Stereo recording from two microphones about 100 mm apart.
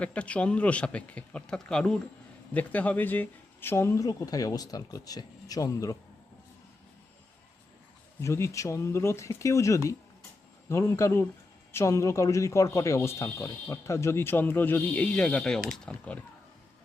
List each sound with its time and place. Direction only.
0.0 s speech: 10° left (ahead or behind); by 6.0 s 35° left (ahead or behind)
8.2 s speech: 30° left (ahead or behind); by 16.2 s 15° left (ahead or behind)